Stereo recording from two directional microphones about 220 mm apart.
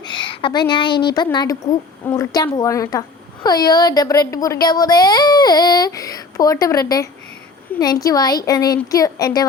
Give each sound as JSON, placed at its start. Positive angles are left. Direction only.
{"t": 0.0, "sound": "a woman's voice", "side_deg": 20}